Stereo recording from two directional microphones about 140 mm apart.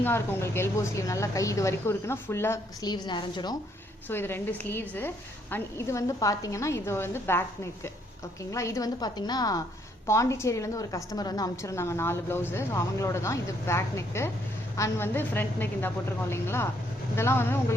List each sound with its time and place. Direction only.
0.0 s a woman's voice: 15° left (ahead or behind)
2.9 s a woman's voice: 30° left (ahead or behind)
4.1 s a woman's voice: 15° left (ahead or behind)